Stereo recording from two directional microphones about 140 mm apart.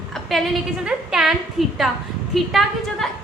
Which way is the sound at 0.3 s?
Centre (ahead or behind).